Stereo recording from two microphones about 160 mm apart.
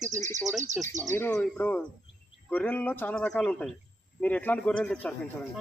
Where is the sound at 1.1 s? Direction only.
15° left (ahead or behind).